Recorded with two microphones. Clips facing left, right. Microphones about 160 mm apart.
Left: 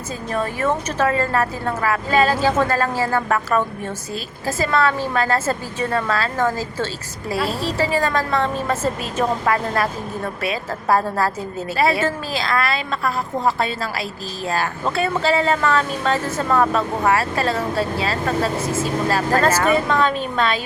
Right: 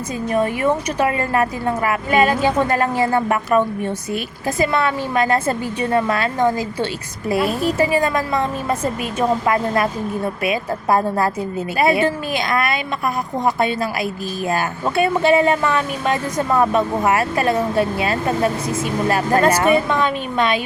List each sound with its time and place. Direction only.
0.3 s a woman's voice: 15° right (ahead or behind)